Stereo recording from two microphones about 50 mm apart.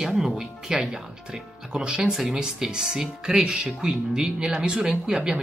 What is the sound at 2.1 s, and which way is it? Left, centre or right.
Speech, centre.